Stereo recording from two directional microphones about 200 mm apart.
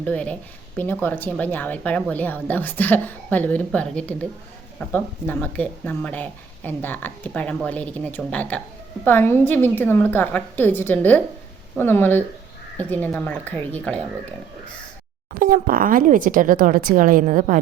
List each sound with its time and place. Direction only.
0.0 s speech: 5° left (ahead or behind)
15.3 s speech: 45° right (ahead or behind)